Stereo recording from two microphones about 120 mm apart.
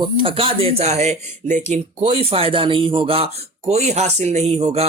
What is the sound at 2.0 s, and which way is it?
A man's voice, 50° right (ahead or behind).